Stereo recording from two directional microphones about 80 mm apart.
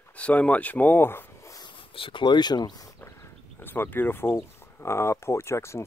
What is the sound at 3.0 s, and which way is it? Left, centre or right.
Speech, left.